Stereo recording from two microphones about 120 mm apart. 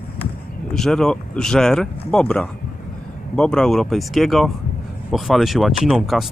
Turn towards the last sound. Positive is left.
turn(degrees=0)  # may be behind; listen again after turning